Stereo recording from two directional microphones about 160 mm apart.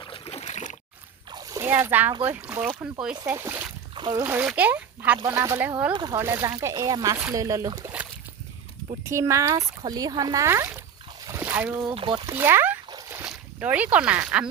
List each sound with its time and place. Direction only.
0.0 s a sound: 35° left (ahead or behind)
1.3 s splash: 20° right (ahead or behind)
2.2 s speech: 10° right (ahead or behind)
3.2 s speech: 15° right (ahead or behind)
3.9 s splash: 30° right (ahead or behind)
4.2 s speech: 10° right (ahead or behind)
5.9 s speech: 25° right (ahead or behind)
9.0 s speech: 20° right (ahead or behind)
11.3 s a sound: 10° right (ahead or behind)
11.9 s speech: 30° right (ahead or behind)
12.2 s speech: 15° right (ahead or behind)
12.9 s splash: 20° right (ahead or behind)
13.2 s speech: 10° right (ahead or behind)